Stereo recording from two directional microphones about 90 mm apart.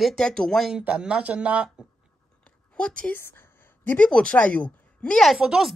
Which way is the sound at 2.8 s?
10° left (ahead or behind).